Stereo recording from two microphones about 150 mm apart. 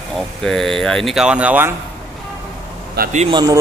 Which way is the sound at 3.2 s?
30° right (ahead or behind).